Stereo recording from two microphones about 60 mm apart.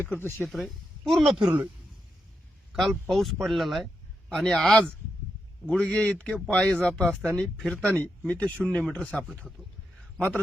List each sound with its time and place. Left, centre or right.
0.0 s speech: left
0.5 s speech: centre
2.7 s speech: centre
5.9 s speech: centre